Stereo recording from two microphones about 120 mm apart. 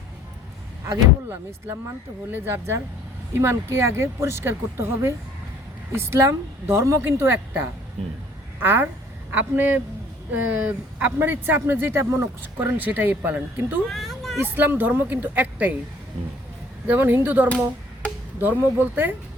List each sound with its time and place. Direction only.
2.3 s speech: 25° right (ahead or behind)
13.8 s a sound: centre (ahead or behind)
14.4 s speech: 15° right (ahead or behind)
16.8 s speech: 15° right (ahead or behind)
18.0 s chop: 10° left (ahead or behind)
18.3 s speech: 15° right (ahead or behind)